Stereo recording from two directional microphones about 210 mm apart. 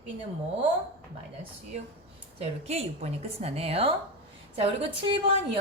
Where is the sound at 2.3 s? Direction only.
30° right (ahead or behind).